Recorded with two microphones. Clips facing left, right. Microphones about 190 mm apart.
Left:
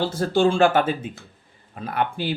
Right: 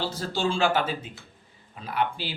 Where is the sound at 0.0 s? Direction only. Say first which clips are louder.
Left 8 dB; 55° left (ahead or behind).